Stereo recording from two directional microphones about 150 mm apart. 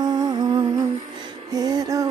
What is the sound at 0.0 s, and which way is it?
Music, 25° right (ahead or behind).